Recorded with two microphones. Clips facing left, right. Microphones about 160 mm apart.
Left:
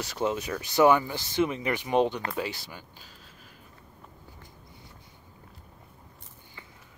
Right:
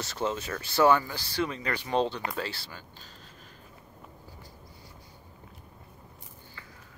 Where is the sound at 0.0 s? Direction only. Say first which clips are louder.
Left 2 dB; 10° left (ahead or behind).